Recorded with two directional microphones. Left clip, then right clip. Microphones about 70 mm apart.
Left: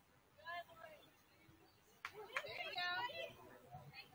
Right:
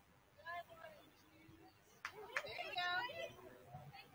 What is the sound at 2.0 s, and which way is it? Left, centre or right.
Chatter, left.